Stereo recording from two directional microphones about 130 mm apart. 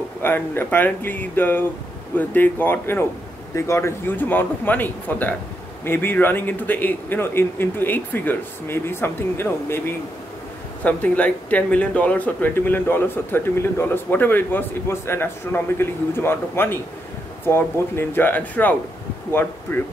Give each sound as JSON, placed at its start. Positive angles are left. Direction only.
{"t": 0.2, "sound": "speech", "side_deg": 15}